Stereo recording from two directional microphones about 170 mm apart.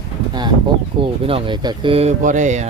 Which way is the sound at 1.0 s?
30° right (ahead or behind).